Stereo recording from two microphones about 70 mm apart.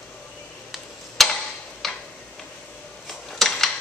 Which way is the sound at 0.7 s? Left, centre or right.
Centre.